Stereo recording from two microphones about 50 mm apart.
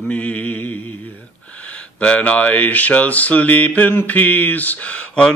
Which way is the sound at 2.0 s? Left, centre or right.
Left.